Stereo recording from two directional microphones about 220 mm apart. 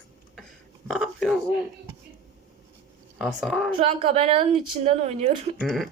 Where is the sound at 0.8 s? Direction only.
Centre (ahead or behind).